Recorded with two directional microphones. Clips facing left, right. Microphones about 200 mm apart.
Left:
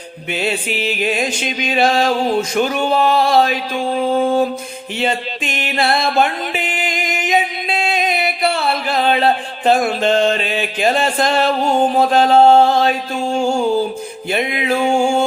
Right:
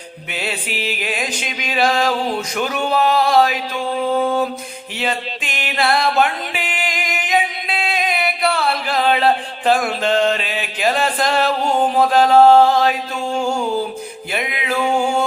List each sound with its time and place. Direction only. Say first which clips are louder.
0.3 s music: left 5 dB; 25° left (ahead or behind)
14.3 s music: left 5 dB; 25° left (ahead or behind)